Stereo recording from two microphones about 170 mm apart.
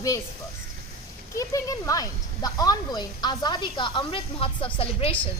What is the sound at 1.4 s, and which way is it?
A woman's voice, 20° left (ahead or behind).